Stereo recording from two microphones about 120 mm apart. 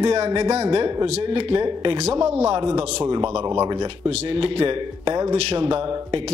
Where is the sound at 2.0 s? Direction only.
65° right (ahead or behind).